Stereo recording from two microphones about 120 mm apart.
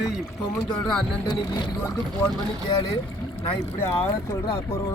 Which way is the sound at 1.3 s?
40° left (ahead or behind).